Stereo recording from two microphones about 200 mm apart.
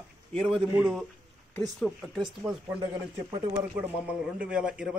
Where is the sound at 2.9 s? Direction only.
20° right (ahead or behind).